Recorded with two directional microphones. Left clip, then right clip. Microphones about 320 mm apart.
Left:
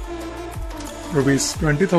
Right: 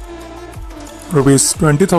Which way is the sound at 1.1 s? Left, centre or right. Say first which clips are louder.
Right 7 dB; centre.